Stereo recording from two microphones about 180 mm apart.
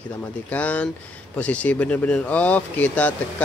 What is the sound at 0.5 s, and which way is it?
Speech, 10° left (ahead or behind).